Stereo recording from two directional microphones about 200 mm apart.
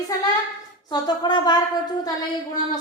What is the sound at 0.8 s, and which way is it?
Speech, 20° left (ahead or behind).